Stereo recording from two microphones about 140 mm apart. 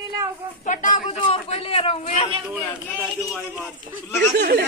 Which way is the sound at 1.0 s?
40° left (ahead or behind).